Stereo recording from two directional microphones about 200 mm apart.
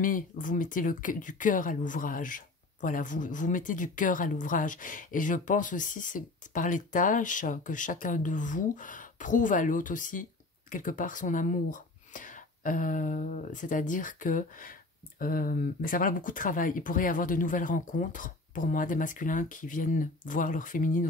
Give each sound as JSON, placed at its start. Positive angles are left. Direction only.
{"t": 0.0, "sound": "speech", "side_deg": 40}